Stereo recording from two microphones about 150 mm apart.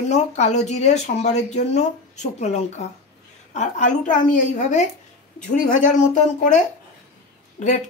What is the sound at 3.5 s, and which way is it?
Speech, 50° left (ahead or behind).